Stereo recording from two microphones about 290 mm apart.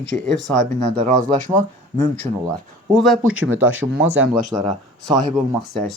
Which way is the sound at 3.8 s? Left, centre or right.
Centre.